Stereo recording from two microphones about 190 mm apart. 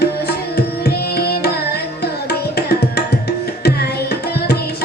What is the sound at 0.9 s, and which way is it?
Tabla, 55° left (ahead or behind).